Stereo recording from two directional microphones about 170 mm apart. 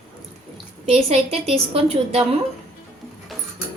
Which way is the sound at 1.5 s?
35° right (ahead or behind).